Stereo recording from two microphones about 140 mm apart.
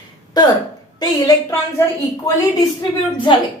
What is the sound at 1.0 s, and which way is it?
Speech, 25° left (ahead or behind).